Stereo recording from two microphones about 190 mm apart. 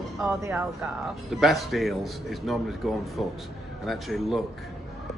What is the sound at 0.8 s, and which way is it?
A man's voice, centre (ahead or behind).